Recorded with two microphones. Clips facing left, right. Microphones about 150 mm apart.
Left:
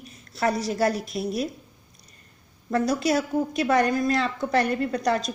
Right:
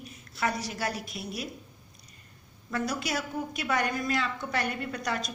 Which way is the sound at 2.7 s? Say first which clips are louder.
Left 9 dB; 35° left (ahead or behind).